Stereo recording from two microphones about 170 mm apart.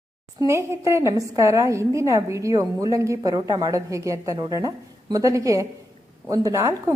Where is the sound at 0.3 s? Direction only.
15° right (ahead or behind).